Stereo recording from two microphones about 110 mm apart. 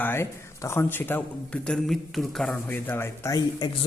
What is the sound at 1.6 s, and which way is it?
Speech, 5° left (ahead or behind).